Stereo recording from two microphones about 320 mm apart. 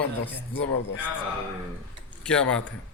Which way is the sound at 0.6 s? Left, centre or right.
Left.